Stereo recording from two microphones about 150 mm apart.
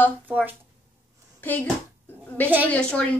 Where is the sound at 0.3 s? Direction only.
10° right (ahead or behind).